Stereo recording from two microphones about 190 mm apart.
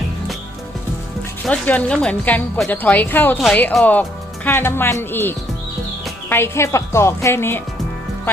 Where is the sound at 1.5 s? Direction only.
5° left (ahead or behind).